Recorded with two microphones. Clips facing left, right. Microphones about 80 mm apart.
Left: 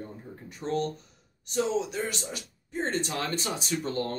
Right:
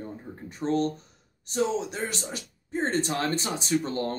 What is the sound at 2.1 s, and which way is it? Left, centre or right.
Speech, right.